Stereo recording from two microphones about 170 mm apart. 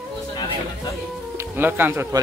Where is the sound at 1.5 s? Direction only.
10° right (ahead or behind).